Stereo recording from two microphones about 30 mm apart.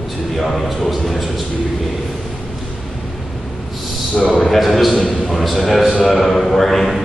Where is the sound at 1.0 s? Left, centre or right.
Centre.